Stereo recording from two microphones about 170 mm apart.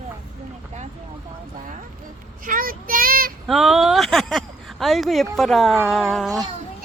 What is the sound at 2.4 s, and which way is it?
Child singing, 55° right (ahead or behind).